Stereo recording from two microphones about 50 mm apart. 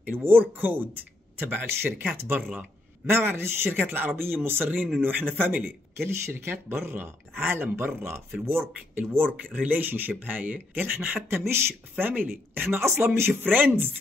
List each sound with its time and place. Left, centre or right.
0.0 s speech: right
3.8 s speech: right
5.9 s speech: right
9.1 s speech: right
11.2 s speech: right
12.0 s speech: right
13.4 s speech: right